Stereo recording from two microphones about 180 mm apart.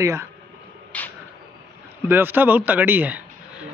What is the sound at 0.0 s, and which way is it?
Speech, 15° right (ahead or behind).